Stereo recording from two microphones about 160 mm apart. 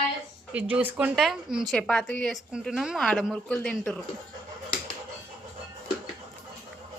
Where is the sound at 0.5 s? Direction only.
10° right (ahead or behind); by 4.0 s 5° left (ahead or behind).